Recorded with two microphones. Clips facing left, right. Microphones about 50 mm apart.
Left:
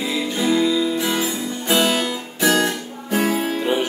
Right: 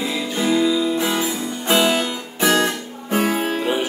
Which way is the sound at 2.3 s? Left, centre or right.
Right.